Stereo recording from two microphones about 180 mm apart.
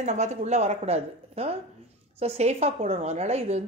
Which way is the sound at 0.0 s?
40° right (ahead or behind).